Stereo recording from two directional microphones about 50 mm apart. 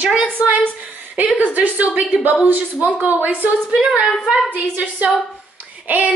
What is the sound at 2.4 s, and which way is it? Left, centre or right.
Speech, right.